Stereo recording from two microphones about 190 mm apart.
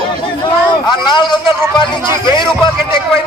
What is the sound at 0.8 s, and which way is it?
A man's voice, 25° left (ahead or behind).